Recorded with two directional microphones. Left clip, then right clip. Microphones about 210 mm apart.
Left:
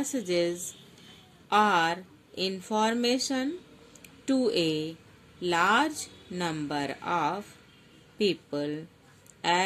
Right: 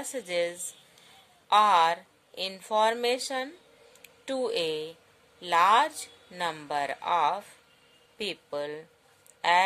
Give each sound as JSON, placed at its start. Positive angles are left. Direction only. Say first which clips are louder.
{"t": 0.0, "sound": "speech", "louder": "left 2 dB", "side_deg": -30}